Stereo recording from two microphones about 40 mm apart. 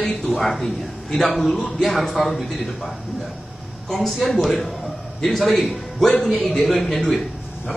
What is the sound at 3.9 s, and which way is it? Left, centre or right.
A man's voice, centre.